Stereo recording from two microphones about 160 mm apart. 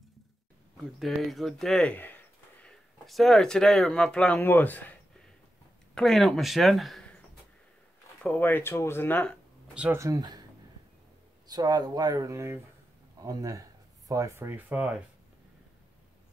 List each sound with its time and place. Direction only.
0.9 s speech: centre (ahead or behind)
5.9 s speech: centre (ahead or behind)
8.2 s speech: 10° left (ahead or behind)
9.8 s speech: 15° right (ahead or behind)
11.4 s speech: 25° right (ahead or behind); by 15.0 s 10° right (ahead or behind)